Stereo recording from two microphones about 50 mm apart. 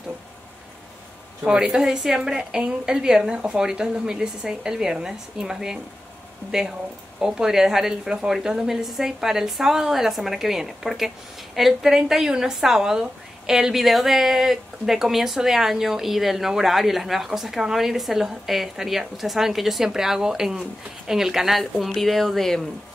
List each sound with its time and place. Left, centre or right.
1.4 s a woman's voice: centre